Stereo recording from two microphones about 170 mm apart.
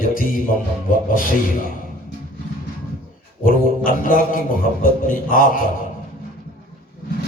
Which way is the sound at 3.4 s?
55° left (ahead or behind).